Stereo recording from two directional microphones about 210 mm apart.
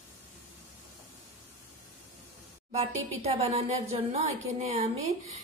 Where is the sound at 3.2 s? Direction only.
30° right (ahead or behind).